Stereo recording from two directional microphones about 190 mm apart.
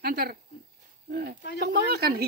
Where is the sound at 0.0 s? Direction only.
55° right (ahead or behind).